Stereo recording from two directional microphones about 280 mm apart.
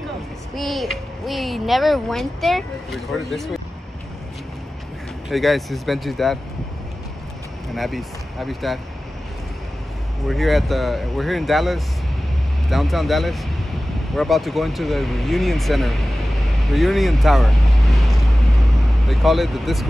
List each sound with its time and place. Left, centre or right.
0.6 s a child's voice: centre
5.3 s a child's voice: centre
7.7 s speech: centre
10.2 s a child's voice: centre
16.7 s vehicle: centre